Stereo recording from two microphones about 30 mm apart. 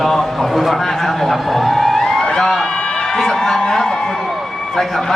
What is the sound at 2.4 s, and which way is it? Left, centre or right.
Speech, centre.